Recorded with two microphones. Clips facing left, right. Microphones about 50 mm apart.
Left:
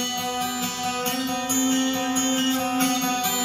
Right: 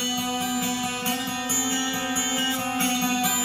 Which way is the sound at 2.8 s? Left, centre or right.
Centre.